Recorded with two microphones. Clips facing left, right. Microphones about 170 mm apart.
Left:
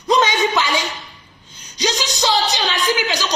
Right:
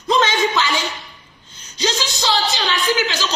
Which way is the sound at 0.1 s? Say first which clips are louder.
Left 1 dB; 15° left (ahead or behind).